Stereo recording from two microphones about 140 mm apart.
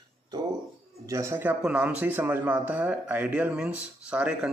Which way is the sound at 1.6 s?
5° right (ahead or behind).